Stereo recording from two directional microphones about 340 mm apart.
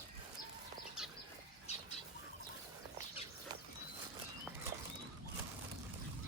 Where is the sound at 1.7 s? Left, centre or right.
Centre.